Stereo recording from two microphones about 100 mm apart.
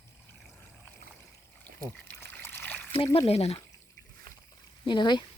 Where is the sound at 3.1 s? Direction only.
85° left.